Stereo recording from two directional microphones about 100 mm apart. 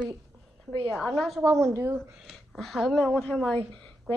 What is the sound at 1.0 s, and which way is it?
Speech, 5° left (ahead or behind).